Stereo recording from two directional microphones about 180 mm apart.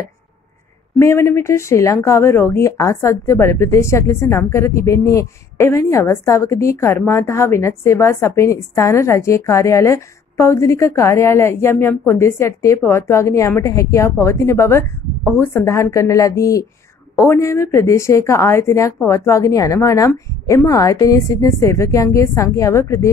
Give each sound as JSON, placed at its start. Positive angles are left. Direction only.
{"t": 0.9, "sound": "a woman's voice", "side_deg": 15}